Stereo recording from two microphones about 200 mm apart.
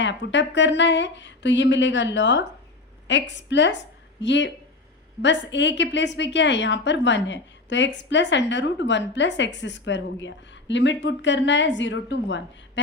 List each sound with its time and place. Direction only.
0.0 s a woman's voice: 65° left (ahead or behind)